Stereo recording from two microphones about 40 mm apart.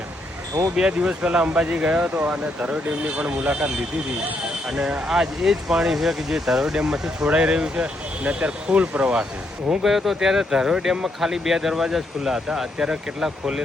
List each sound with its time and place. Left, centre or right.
0.8 s speech: right
2.1 s speech: right
5.0 s speech: centre
9.8 s speech: centre